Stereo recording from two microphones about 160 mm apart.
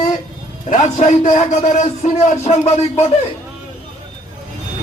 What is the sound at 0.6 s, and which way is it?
A man's voice, 50° left (ahead or behind).